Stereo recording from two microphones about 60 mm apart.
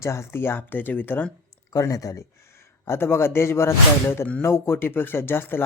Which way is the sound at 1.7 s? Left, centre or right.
Left.